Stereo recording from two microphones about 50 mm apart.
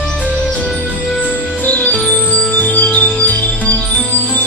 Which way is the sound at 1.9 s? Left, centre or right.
Centre.